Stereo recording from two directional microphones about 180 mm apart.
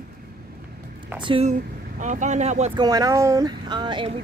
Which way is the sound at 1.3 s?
35° right (ahead or behind).